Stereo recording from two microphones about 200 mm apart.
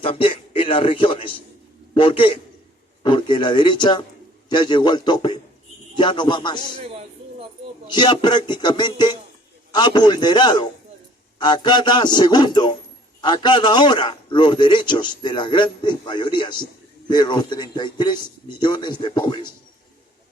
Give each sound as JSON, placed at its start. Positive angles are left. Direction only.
{"t": 0.0, "sound": "a man's voice", "side_deg": 25}
{"t": 7.9, "sound": "a man's voice", "side_deg": 20}